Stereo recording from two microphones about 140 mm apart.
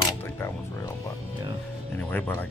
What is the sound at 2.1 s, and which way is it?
Speech, 10° left (ahead or behind).